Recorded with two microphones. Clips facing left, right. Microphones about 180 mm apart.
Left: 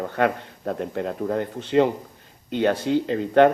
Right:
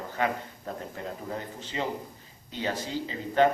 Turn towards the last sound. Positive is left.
turn(degrees=65)  # may be behind; listen again after turning